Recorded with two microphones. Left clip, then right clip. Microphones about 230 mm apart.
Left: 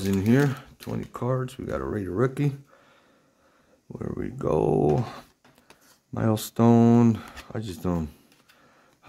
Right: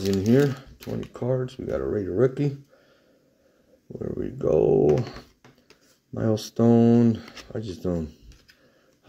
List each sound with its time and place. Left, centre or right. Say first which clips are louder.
0.0 s speech: right 2 dB; left
4.0 s speech: right 3 dB; left
4.6 s speech: right 3 dB; left
6.1 s speech: right 1 dB; left